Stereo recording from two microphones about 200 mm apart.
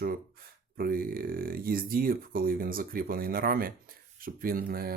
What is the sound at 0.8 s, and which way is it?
Speech, 45° right (ahead or behind).